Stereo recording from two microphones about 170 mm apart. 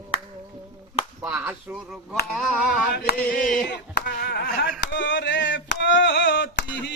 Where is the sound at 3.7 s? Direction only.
70° left (ahead or behind); by 6.8 s 90° left.